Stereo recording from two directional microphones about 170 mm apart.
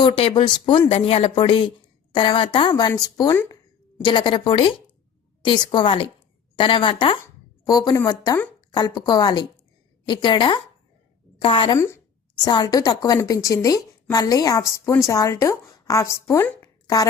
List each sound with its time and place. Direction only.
0.0 s a woman's voice: 35° left (ahead or behind)
3.3 s a sound: 10° left (ahead or behind)
4.0 s a woman's voice: 30° left (ahead or behind)